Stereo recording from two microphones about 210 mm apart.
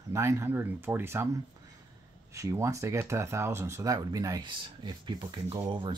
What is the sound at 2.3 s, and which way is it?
Speech, 15° right (ahead or behind).